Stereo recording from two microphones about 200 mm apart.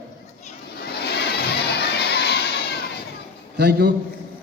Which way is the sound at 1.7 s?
55° left (ahead or behind).